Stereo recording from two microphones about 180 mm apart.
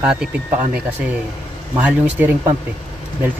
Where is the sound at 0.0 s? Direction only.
5° right (ahead or behind).